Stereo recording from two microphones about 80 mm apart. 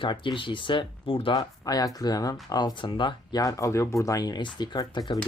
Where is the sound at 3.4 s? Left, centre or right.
Left.